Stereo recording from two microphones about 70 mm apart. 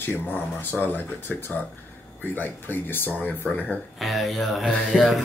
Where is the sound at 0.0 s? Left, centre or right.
Left.